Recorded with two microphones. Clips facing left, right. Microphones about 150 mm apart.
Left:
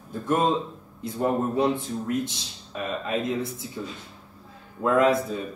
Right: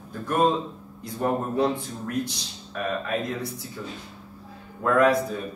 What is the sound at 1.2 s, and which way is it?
A man's voice, 20° left (ahead or behind).